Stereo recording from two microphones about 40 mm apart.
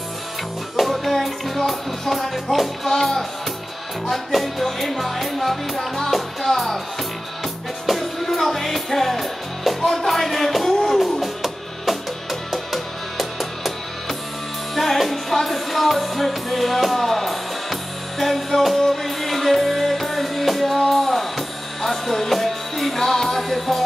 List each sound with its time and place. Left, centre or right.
0.7 s music: centre
7.8 s music: centre
14.8 s music: centre